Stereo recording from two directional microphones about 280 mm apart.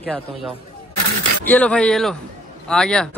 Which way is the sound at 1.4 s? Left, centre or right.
Centre.